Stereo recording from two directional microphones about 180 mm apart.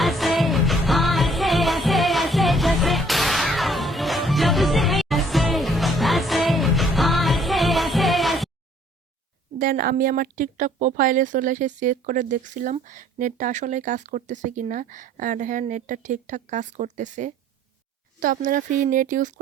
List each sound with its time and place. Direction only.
0.0 s music: centre (ahead or behind)
9.6 s a woman's voice: 55° right (ahead or behind)